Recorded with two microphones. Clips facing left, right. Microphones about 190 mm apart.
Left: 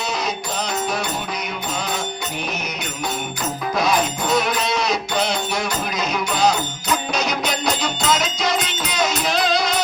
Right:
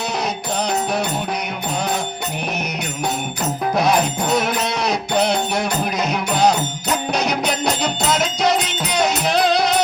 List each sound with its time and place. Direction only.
4.6 s music: 60° right (ahead or behind)